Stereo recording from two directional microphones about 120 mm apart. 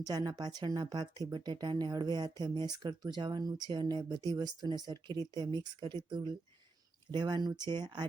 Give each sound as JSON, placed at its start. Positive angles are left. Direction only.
{"t": 0.0, "sound": "speech", "side_deg": -35}